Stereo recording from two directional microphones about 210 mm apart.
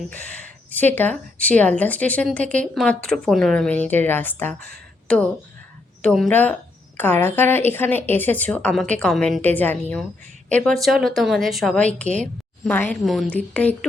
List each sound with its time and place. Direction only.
0.7 s a woman's voice: 10° left (ahead or behind)